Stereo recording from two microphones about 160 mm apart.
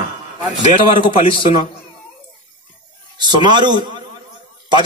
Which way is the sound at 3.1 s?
30° right (ahead or behind).